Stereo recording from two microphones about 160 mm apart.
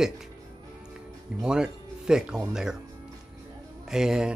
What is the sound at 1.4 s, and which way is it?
Speech, 5° right (ahead or behind).